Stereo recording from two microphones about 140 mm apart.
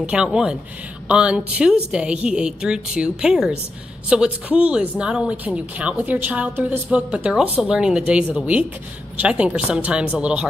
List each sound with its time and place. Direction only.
0.0 s a woman's voice: 5° right (ahead or behind)